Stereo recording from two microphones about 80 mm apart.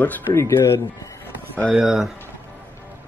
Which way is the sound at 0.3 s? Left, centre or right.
Left.